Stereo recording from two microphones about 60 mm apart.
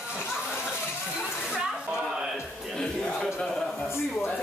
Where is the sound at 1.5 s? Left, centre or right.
Centre.